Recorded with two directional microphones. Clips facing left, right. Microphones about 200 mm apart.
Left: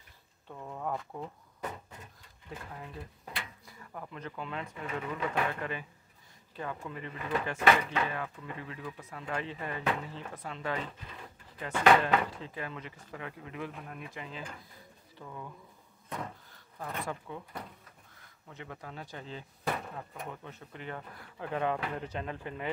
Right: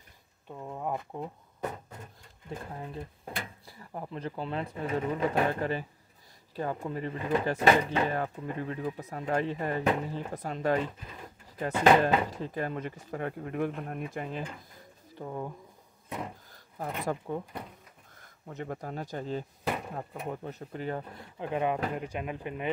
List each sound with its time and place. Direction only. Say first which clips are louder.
0.5 s speech: right 2 dB; 15° right (ahead or behind)
2.5 s speech: right 5 dB; 30° right (ahead or behind)
11.7 s speech: right 2 dB; 30° right (ahead or behind)
16.1 s speech: right 2 dB; 15° right (ahead or behind)
16.5 s a sound: right 6 dB; 40° right (ahead or behind)
17.0 s speech: right 7 dB; 45° right (ahead or behind)
21.1 s speech: right 3 dB; 20° right (ahead or behind)